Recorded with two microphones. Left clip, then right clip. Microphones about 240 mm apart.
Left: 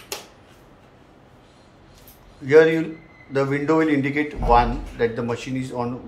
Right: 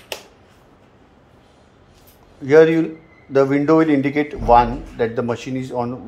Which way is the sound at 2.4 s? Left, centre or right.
Right.